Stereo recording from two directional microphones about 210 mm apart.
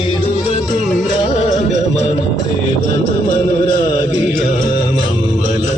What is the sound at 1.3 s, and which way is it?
Music, 35° left (ahead or behind).